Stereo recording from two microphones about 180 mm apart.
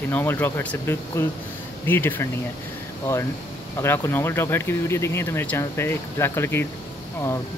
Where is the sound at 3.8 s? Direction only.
15° left (ahead or behind).